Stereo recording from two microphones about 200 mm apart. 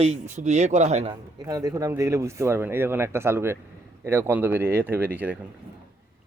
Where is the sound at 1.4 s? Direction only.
15° right (ahead or behind).